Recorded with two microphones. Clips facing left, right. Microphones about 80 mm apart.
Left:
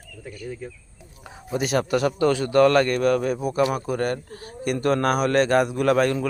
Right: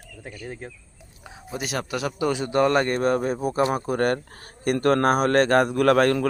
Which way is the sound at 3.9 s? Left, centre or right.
Right.